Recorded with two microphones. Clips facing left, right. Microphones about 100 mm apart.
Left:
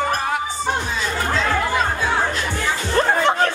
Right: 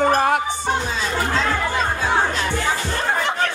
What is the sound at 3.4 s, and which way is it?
Chatter, 35° left (ahead or behind).